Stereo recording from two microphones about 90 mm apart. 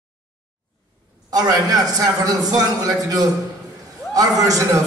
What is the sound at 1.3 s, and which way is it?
A man's voice, 45° right (ahead or behind).